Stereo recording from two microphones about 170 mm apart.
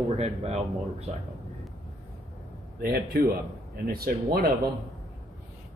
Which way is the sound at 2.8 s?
65° right (ahead or behind).